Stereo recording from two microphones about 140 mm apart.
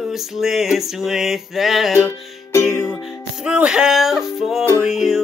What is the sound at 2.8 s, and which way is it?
Music, 5° right (ahead or behind).